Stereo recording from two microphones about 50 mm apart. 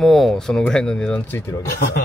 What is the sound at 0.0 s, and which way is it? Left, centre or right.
Speech, centre.